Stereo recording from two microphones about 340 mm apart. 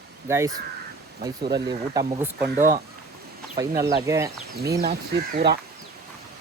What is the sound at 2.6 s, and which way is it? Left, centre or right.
Speech, right.